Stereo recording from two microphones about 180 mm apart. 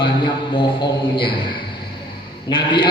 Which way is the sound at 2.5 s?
25° left (ahead or behind).